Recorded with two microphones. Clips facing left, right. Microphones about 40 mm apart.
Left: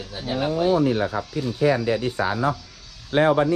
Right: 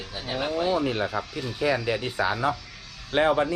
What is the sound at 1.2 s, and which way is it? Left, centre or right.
Speech, right.